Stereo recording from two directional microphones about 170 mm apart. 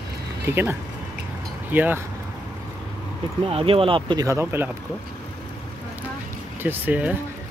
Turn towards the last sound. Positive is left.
turn(degrees=-10)  # may be behind; listen again after turning